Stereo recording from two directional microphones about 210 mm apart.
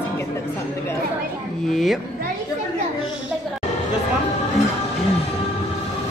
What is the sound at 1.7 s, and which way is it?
Speech, centre (ahead or behind).